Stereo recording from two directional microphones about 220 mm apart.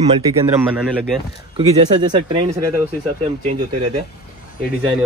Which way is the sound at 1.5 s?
20° right (ahead or behind).